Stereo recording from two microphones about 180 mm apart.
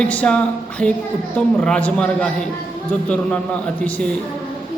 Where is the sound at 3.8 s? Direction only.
5° left (ahead or behind).